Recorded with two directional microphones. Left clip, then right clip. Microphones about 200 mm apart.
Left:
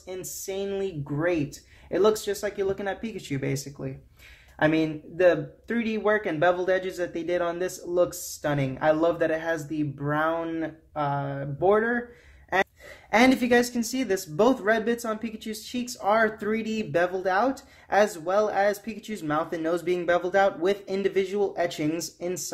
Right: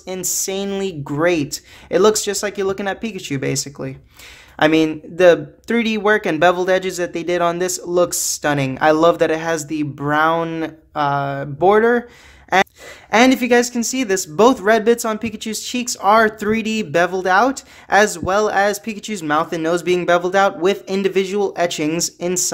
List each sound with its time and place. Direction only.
0.0 s speech: 45° right (ahead or behind)
13.1 s speech: 25° right (ahead or behind)